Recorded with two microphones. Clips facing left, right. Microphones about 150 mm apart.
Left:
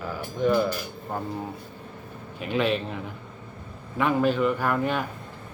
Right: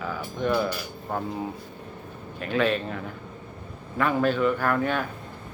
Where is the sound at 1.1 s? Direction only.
Centre (ahead or behind).